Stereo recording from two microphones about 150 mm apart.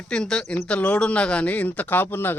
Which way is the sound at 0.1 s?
5° left (ahead or behind).